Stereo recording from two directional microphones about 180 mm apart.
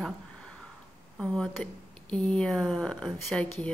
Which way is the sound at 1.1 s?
5° left (ahead or behind).